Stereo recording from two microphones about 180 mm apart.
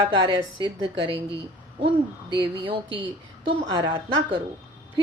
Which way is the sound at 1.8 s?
30° right (ahead or behind).